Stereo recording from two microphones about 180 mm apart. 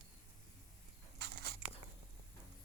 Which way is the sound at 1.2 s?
65° right (ahead or behind).